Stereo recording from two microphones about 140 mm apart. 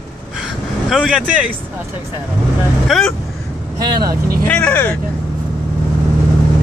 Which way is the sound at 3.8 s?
30° right (ahead or behind).